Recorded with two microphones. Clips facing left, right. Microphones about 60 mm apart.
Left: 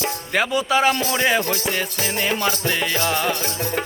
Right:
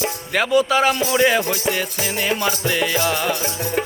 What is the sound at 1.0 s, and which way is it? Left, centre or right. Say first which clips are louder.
Music: right 3 dB; centre.